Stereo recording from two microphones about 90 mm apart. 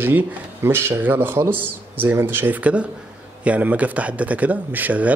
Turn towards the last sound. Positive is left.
turn(degrees=-15)  # may be behind; listen again after turning